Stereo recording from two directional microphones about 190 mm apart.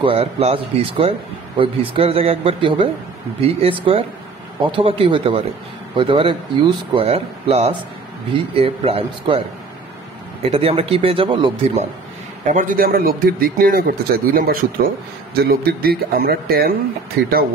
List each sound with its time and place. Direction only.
0.0 s a man's voice: 30° right (ahead or behind)
10.4 s a man's voice: 30° right (ahead or behind)
12.4 s a man's voice: 45° right (ahead or behind)